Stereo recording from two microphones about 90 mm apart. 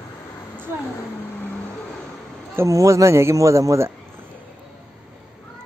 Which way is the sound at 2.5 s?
35° right (ahead or behind).